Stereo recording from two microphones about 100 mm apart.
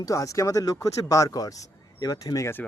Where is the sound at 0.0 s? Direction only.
35° left (ahead or behind).